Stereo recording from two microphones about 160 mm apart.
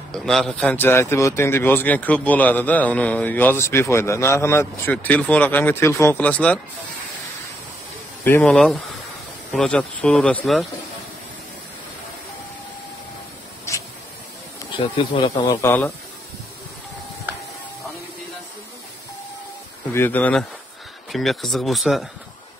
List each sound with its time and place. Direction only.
0.1 s speech: 5° left (ahead or behind)
8.2 s speech: 10° left (ahead or behind)
15.0 s speech: 30° left (ahead or behind)
15.6 s speech: 15° left (ahead or behind)
19.9 s speech: 15° left (ahead or behind)